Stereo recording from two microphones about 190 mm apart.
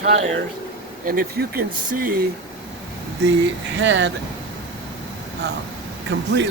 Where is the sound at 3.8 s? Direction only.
70° right (ahead or behind).